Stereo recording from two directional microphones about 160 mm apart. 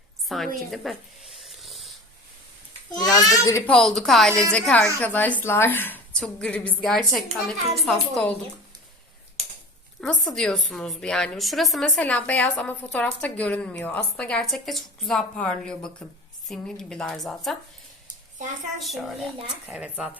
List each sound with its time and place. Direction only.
0.3 s a woman's voice: centre (ahead or behind)
1.4 s rub: centre (ahead or behind)
2.9 s a child's voice: 25° left (ahead or behind)
3.7 s a woman's voice: centre (ahead or behind)
10.0 s a woman's voice: 5° left (ahead or behind)
18.8 s a woman's voice: centre (ahead or behind)